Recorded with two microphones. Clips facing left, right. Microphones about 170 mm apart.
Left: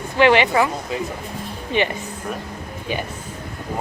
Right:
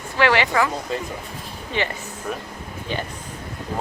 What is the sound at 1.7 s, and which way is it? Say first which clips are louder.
Speech: left 5 dB; 15° left (ahead or behind).